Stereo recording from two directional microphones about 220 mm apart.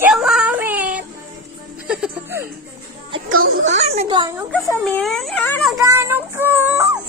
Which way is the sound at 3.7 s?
30° right (ahead or behind).